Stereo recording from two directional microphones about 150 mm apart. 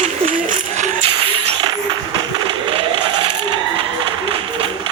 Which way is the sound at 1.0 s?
40° right (ahead or behind).